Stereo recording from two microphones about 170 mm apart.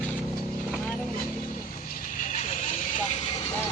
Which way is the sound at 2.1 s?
50° left (ahead or behind).